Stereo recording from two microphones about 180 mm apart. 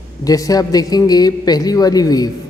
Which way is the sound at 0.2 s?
20° left (ahead or behind).